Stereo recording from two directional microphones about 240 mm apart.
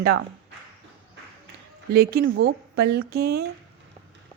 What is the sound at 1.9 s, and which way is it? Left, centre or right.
A woman's voice, right.